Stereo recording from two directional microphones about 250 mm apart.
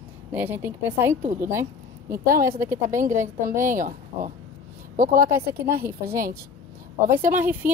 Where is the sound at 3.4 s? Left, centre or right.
Right.